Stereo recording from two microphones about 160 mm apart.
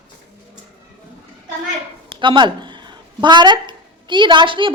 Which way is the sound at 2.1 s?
30° right (ahead or behind).